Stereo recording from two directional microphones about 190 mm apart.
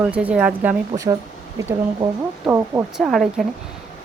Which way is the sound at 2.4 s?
15° right (ahead or behind).